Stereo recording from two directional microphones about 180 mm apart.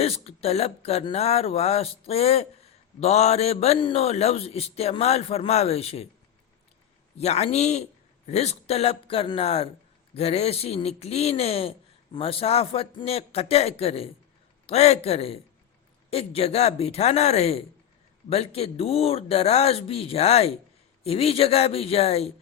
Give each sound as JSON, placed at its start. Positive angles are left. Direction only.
{"t": 0.0, "sound": "speech", "side_deg": 35}
{"t": 7.2, "sound": "speech", "side_deg": 35}